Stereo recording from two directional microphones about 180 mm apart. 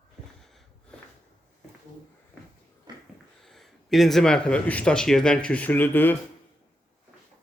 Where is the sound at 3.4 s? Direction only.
Centre (ahead or behind).